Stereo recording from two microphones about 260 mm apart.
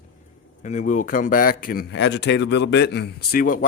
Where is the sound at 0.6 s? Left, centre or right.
Left.